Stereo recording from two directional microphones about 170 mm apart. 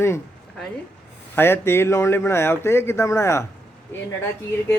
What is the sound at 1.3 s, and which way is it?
Speech, 15° left (ahead or behind).